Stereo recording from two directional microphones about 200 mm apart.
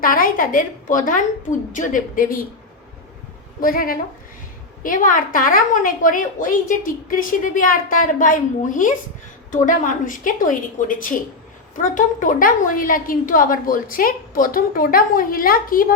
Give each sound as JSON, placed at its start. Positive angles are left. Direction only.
{"t": 0.0, "sound": "a woman's voice", "side_deg": 45}
{"t": 3.6, "sound": "a woman's voice", "side_deg": 45}